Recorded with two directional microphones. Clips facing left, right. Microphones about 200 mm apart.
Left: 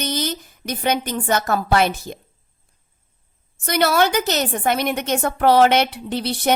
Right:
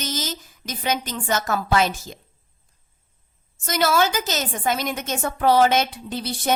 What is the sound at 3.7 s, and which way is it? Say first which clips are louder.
A woman's voice: left 3 dB; 60° left (ahead or behind).